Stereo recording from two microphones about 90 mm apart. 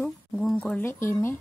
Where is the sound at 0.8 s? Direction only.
30° left (ahead or behind).